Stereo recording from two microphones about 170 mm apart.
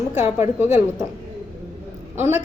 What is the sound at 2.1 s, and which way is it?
Speech, 15° right (ahead or behind).